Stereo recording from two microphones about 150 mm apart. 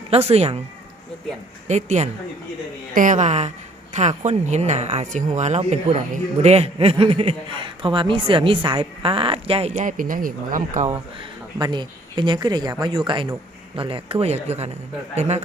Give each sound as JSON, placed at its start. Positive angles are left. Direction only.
{"t": 0.1, "sound": "speech", "side_deg": -45}
{"t": 1.6, "sound": "a woman's voice", "side_deg": -50}
{"t": 9.7, "sound": "speech", "side_deg": -60}
{"t": 11.6, "sound": "a man's voice", "side_deg": -30}